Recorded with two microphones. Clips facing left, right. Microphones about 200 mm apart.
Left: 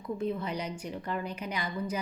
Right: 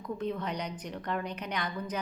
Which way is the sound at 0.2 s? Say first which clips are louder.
Left 1 dB; 5° left (ahead or behind).